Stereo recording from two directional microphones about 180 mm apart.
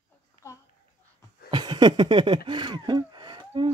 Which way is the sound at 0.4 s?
15° left (ahead or behind).